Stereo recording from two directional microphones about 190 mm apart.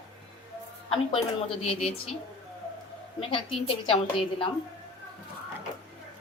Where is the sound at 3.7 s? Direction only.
30° left (ahead or behind).